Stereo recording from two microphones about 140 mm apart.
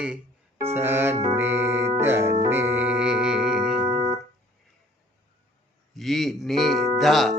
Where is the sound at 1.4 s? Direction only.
20° right (ahead or behind).